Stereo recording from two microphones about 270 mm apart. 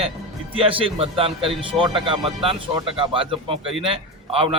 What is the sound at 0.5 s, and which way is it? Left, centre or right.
A man's voice, centre.